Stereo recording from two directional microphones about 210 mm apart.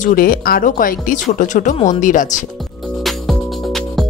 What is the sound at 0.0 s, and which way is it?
Speech, 40° left (ahead or behind).